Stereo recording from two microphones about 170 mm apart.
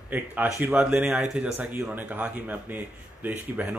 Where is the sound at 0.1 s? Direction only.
10° right (ahead or behind).